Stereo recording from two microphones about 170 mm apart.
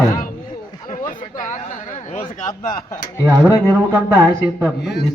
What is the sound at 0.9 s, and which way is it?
Chatter, 50° left (ahead or behind).